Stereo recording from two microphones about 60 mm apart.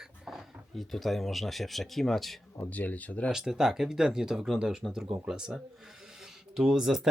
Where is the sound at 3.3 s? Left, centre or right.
Centre.